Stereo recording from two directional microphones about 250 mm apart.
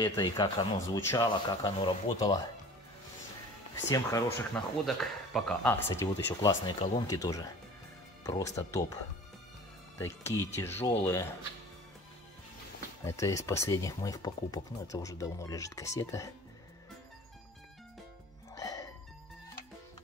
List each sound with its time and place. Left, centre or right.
0.0 s speech: centre
3.9 s speech: centre
4.8 s speech: centre
9.9 s speech: centre
13.0 s speech: centre
18.6 s music: centre